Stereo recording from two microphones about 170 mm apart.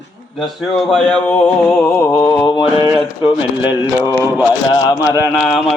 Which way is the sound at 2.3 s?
15° left (ahead or behind).